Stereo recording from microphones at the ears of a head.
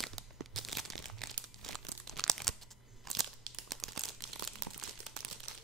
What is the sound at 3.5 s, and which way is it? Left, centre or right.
Crumpling, right.